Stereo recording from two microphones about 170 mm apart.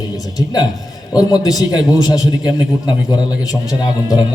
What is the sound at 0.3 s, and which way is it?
A man's voice, 20° left (ahead or behind).